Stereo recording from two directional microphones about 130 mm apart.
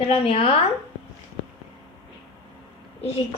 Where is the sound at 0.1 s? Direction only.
50° left (ahead or behind).